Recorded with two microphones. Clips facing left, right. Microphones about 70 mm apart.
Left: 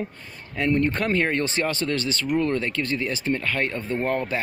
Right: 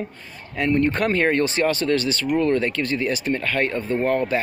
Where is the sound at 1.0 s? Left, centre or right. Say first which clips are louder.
Right 4 dB; centre.